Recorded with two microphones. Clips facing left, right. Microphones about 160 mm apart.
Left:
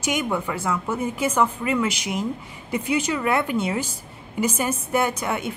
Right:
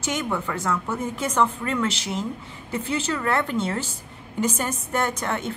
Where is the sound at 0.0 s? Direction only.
15° left (ahead or behind).